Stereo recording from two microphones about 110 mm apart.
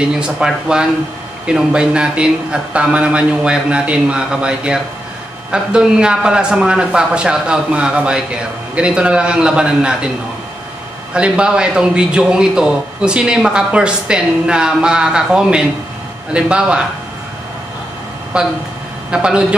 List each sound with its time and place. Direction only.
0.0 s a man's voice: 5° right (ahead or behind)
11.1 s a man's voice: 10° right (ahead or behind)
18.3 s a man's voice: 10° right (ahead or behind)